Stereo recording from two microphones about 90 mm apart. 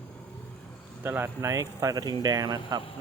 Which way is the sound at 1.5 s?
40° right (ahead or behind).